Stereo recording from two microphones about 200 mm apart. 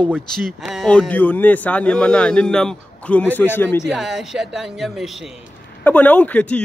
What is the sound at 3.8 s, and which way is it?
Speech, centre (ahead or behind).